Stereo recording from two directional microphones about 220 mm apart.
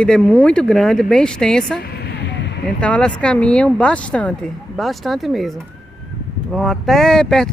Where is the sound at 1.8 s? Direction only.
45° left (ahead or behind).